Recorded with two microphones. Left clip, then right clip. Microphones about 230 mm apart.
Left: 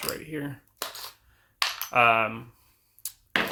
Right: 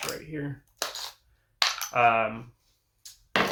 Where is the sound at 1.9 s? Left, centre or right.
Left.